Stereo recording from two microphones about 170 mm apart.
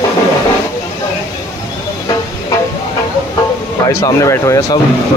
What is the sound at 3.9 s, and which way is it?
Speech, 20° left (ahead or behind).